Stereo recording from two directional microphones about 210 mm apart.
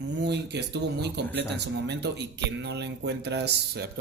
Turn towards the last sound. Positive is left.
turn(degrees=-55)  # may be behind; listen again after turning